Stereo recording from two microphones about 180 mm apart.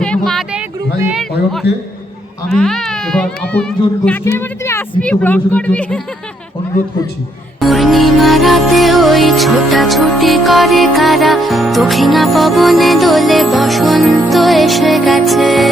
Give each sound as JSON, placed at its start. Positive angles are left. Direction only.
{"t": 0.0, "sound": "speech", "side_deg": 5}
{"t": 0.9, "sound": "speech", "side_deg": -10}
{"t": 1.6, "sound": "a man's voice", "side_deg": 65}
{"t": 2.5, "sound": "speech", "side_deg": 0}
{"t": 7.6, "sound": "music", "side_deg": 0}